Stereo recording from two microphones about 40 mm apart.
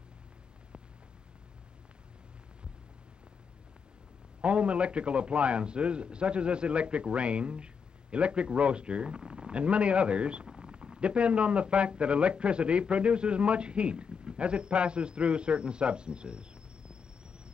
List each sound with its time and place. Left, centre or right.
4.4 s speech: right